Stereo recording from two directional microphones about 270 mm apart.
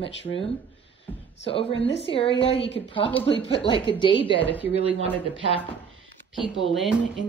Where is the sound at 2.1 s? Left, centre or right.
Centre.